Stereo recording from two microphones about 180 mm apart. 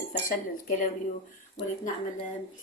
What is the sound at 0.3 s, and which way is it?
Speech, 50° left (ahead or behind).